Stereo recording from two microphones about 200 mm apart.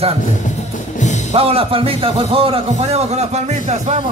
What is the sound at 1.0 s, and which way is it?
Music, 35° left (ahead or behind).